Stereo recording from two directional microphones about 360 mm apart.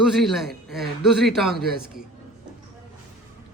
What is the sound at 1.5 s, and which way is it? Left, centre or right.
Speech, right.